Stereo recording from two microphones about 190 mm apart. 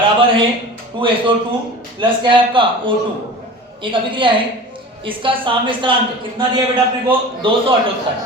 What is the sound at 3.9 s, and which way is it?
A woman's voice, 25° right (ahead or behind).